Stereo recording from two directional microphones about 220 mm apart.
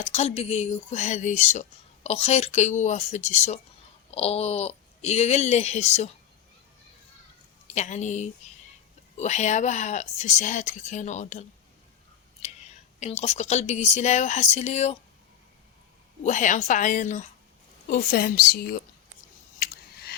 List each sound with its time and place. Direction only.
0.0 s a woman's voice: 30° left (ahead or behind)
7.8 s a woman's voice: 30° left (ahead or behind)
12.4 s whispering: 30° left (ahead or behind)
13.0 s a woman's voice: 30° left (ahead or behind)
16.2 s a woman's voice: 35° left (ahead or behind)
19.5 s a sound: 45° left (ahead or behind)